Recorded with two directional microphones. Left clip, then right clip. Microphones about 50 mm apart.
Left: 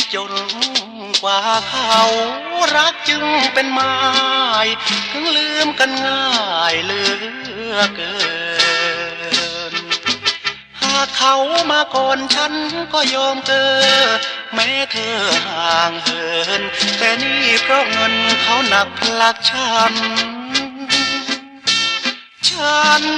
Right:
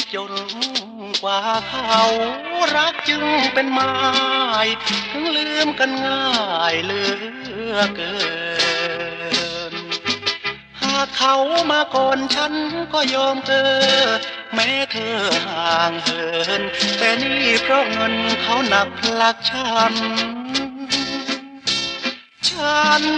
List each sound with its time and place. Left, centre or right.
0.0 s music: left